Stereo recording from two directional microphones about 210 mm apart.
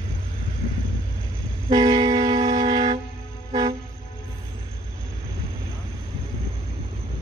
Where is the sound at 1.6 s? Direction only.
20° right (ahead or behind).